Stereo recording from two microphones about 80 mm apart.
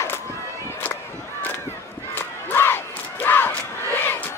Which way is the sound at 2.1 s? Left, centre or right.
Left.